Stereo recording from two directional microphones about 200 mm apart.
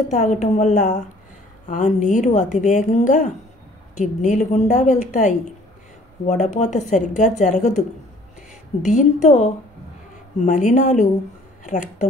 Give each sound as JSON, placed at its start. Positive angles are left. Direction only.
{"t": 0.1, "sound": "a woman's voice", "side_deg": 35}
{"t": 6.2, "sound": "a woman's voice", "side_deg": 35}
{"t": 8.8, "sound": "a woman's voice", "side_deg": 35}